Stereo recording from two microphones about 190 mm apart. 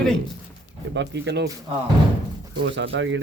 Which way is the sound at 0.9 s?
65° right (ahead or behind).